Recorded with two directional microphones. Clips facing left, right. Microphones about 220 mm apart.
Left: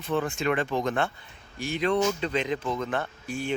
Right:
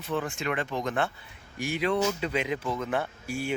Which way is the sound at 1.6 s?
10° right (ahead or behind).